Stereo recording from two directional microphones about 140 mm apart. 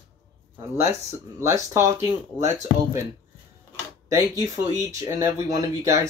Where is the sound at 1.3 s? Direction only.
20° right (ahead or behind).